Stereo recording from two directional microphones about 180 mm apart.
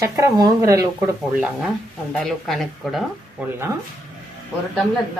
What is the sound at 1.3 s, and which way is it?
Speech, 5° right (ahead or behind).